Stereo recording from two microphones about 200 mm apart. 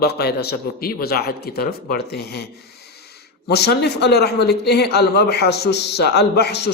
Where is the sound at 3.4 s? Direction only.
55° left (ahead or behind).